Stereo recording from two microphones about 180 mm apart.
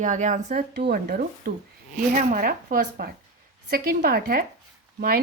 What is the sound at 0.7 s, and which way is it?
A woman's voice, 60° right (ahead or behind).